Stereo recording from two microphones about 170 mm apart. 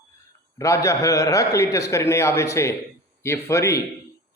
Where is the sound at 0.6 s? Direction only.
15° left (ahead or behind).